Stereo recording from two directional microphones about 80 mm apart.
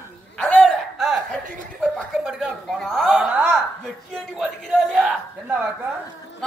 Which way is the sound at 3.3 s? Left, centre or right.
Centre.